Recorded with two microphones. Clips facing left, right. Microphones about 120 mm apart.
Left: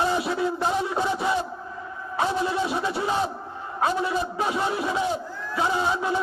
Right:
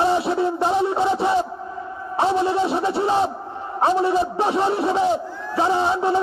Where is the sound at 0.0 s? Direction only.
30° right (ahead or behind).